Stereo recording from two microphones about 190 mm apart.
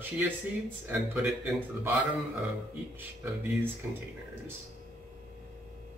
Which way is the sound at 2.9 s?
10° right (ahead or behind).